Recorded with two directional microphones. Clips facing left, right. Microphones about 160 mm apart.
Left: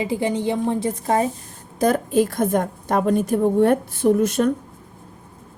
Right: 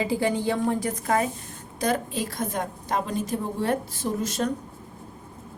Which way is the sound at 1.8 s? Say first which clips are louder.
Left 8 dB; 45° left (ahead or behind).